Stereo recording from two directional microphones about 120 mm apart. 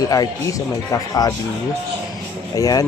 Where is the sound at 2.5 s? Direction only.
30° left (ahead or behind).